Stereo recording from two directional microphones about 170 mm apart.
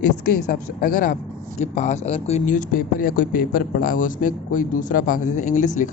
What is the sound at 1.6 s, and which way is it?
Speech, 40° left (ahead or behind).